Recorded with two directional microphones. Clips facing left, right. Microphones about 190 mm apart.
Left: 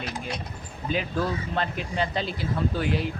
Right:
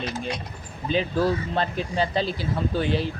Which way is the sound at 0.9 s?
30° right (ahead or behind).